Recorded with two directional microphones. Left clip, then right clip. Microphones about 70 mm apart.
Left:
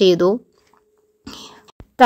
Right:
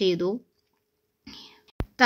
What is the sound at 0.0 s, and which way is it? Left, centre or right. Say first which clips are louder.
Speech: left 11 dB; left.